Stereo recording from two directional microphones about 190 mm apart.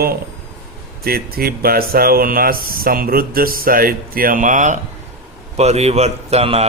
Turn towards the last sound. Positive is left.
turn(degrees=-30)  # may be behind; listen again after turning